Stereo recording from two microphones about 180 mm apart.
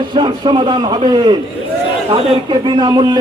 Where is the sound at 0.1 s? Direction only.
25° right (ahead or behind).